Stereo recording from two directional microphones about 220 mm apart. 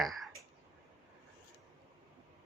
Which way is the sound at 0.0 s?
Centre (ahead or behind).